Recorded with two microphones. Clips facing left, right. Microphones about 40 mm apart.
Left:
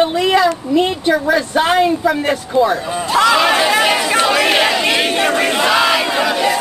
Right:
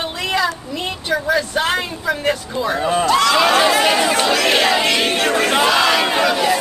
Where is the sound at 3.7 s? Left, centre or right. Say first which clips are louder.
Left 1 dB; centre.